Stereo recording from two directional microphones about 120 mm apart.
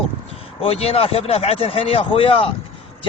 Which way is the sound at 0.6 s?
55° left (ahead or behind).